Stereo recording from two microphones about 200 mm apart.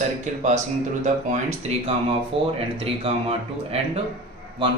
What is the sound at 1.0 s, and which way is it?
A man's voice, 35° right (ahead or behind).